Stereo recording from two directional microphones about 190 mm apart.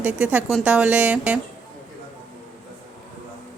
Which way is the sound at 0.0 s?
5° right (ahead or behind).